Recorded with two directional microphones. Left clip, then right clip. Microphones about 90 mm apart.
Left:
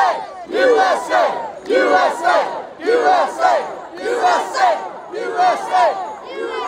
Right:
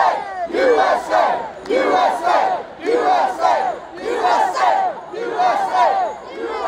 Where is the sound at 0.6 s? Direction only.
20° left (ahead or behind).